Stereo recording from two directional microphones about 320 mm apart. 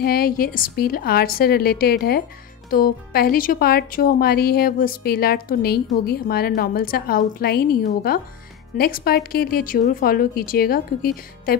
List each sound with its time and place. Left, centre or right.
0.0 s speech: left